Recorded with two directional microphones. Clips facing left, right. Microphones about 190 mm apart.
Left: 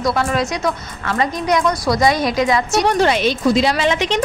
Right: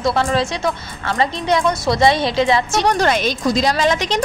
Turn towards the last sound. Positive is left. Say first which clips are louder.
# even
turn(degrees=-40)  # may be behind; listen again after turning